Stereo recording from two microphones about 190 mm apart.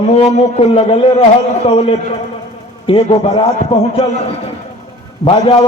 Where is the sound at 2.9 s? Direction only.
30° left (ahead or behind).